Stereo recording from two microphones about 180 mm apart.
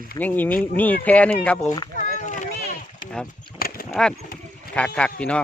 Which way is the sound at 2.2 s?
40° left (ahead or behind).